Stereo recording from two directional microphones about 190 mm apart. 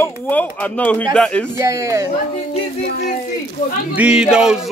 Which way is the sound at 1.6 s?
15° right (ahead or behind).